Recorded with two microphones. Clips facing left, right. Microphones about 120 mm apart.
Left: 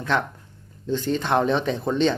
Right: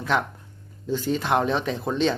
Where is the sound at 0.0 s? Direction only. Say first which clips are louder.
Even; 5° right (ahead or behind).